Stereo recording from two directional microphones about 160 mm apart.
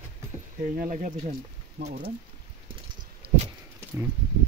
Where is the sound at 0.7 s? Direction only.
55° right (ahead or behind).